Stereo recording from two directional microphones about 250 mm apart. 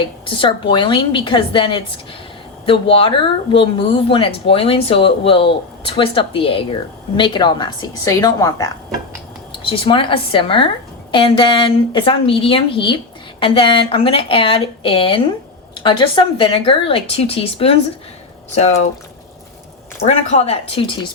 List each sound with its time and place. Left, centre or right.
0.3 s a woman's voice: centre
20.1 s speech: left